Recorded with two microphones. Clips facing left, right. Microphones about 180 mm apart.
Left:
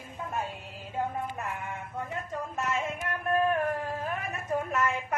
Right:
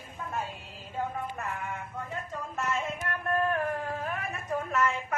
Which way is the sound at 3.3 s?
15° left (ahead or behind).